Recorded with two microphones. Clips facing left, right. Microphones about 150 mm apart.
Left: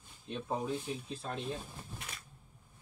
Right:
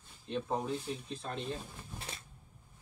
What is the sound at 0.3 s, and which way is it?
Speech, 5° left (ahead or behind).